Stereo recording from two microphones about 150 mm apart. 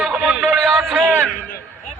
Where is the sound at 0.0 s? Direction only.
5° right (ahead or behind).